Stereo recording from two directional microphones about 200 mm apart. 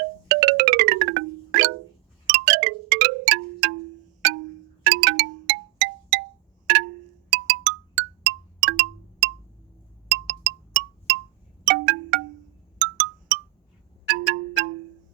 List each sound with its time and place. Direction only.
0.3 s music: 65° right (ahead or behind)
2.2 s wind chime: 65° right (ahead or behind)
4.2 s music: 65° right (ahead or behind)
6.7 s wind chime: 65° right (ahead or behind)
7.3 s music: 65° right (ahead or behind)
12.8 s marimba: 65° right (ahead or behind)